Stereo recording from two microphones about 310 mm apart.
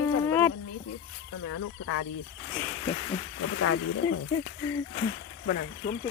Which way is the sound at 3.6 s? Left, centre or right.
Left.